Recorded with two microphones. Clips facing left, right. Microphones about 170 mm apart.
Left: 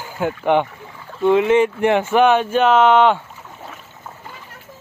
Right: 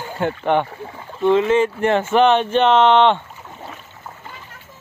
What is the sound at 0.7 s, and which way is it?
Rowboat, 25° right (ahead or behind).